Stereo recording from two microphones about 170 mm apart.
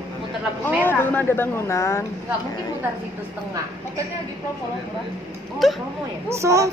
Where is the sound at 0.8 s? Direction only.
10° left (ahead or behind).